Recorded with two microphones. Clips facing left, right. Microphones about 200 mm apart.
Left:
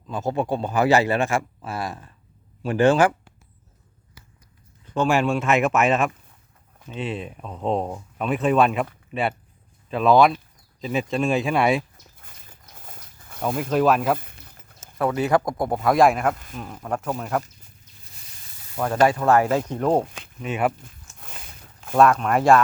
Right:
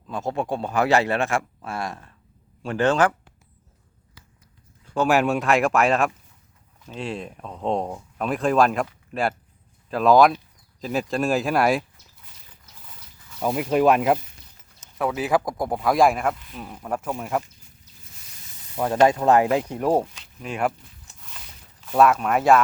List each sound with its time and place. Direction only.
0.1 s speech: centre (ahead or behind)
4.9 s speech: 5° right (ahead or behind)
12.2 s a sound: 50° left (ahead or behind)
13.4 s speech: 10° right (ahead or behind)
14.2 s a sound: 55° left (ahead or behind)
14.9 s speech: centre (ahead or behind)
16.3 s speech: 45° left (ahead or behind)
16.6 s speech: 5° right (ahead or behind)
18.8 s speech: 20° right (ahead or behind)
20.4 s speech: 5° left (ahead or behind)
21.2 s a sound: 50° left (ahead or behind)
21.9 s speech: 5° right (ahead or behind)